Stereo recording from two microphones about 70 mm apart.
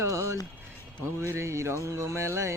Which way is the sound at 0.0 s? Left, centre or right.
Right.